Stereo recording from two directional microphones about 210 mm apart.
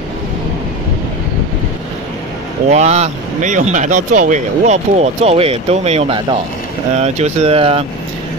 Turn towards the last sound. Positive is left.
turn(degrees=-25)  # may be behind; listen again after turning